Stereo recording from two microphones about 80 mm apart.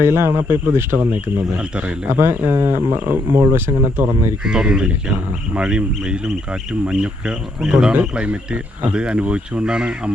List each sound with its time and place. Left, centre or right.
0.0 s speech: right
2.1 s speech: right
4.4 s speech: centre